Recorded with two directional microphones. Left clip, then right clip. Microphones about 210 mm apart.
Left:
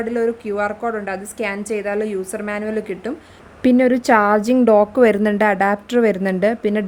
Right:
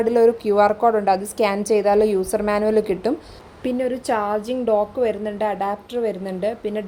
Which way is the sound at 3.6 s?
40° left (ahead or behind).